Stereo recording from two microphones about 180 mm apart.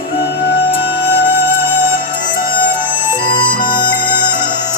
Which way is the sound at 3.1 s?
25° left (ahead or behind).